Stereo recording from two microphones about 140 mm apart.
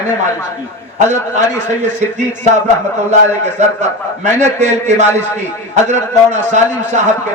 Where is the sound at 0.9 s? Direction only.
55° right (ahead or behind).